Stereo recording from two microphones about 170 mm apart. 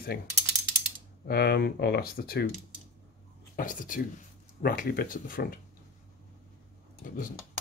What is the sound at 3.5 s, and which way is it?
Speech, 50° left (ahead or behind).